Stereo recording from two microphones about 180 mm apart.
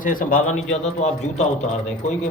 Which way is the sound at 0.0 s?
50° left (ahead or behind).